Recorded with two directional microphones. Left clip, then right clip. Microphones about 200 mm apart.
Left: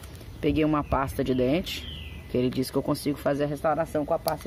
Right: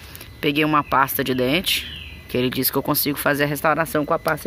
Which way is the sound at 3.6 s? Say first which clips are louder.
Right 6 dB; 25° right (ahead or behind).